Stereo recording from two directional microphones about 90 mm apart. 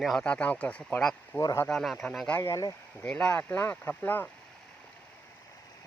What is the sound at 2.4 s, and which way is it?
Speech, 35° left (ahead or behind).